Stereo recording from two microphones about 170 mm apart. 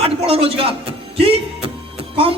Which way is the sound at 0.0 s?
35° right (ahead or behind).